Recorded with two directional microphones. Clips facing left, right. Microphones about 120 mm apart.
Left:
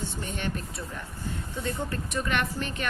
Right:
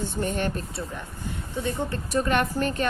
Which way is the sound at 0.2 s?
45° right (ahead or behind).